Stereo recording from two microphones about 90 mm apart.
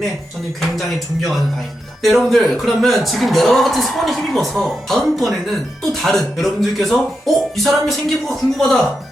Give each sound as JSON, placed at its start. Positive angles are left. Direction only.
{"t": 2.0, "sound": "a man's voice", "side_deg": 0}